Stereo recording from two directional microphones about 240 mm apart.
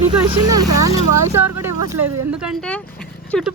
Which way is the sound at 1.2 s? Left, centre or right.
Centre.